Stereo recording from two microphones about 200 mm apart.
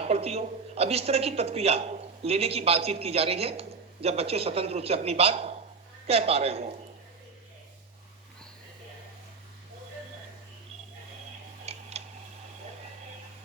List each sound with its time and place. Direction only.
0.0 s a man's voice: 30° right (ahead or behind)
11.6 s tick-tock: 30° right (ahead or behind)